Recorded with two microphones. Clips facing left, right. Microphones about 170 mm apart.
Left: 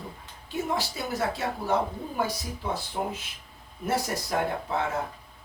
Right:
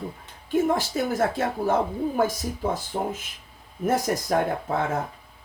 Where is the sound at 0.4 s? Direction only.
50° right (ahead or behind).